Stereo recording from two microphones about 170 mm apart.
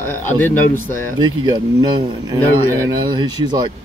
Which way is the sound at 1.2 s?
25° right (ahead or behind).